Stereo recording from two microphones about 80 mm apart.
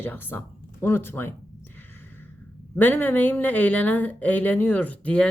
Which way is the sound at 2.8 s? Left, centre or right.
Left.